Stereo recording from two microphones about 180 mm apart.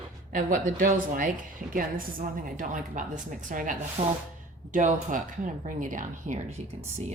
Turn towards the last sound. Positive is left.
turn(degrees=-45)  # may be behind; listen again after turning